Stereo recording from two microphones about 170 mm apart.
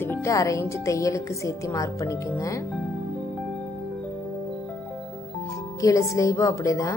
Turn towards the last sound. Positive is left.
turn(degrees=20)  # may be behind; listen again after turning